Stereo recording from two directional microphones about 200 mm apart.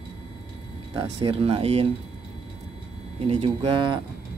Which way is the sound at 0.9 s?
25° right (ahead or behind).